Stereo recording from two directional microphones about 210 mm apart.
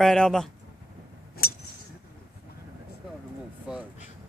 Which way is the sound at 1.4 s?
45° left (ahead or behind).